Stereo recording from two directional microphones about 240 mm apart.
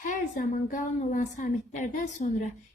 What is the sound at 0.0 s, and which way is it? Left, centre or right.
A woman's voice, left.